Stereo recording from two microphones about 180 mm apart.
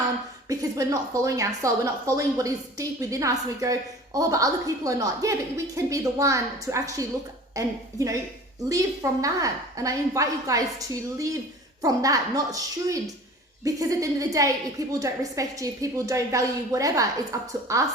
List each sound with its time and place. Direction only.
0.4 s a woman's voice: 20° right (ahead or behind)